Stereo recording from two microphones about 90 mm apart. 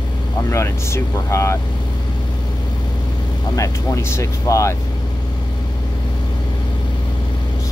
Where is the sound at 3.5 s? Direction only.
40° left (ahead or behind).